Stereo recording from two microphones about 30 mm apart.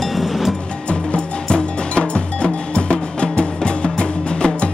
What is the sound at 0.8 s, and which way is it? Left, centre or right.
Cowbell, left.